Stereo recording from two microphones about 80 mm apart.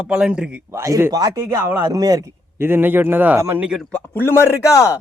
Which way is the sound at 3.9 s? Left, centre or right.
Left.